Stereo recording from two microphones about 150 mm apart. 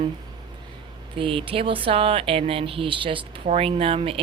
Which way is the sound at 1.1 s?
35° right (ahead or behind).